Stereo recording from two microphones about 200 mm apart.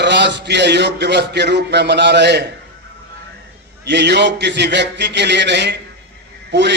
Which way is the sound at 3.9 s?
60° right (ahead or behind).